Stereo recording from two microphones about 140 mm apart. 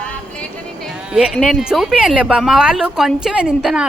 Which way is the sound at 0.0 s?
10° left (ahead or behind).